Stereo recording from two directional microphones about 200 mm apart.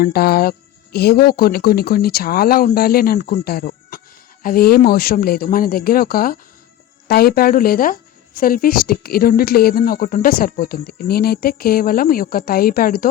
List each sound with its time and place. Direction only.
0.0 s speech: 50° left (ahead or behind)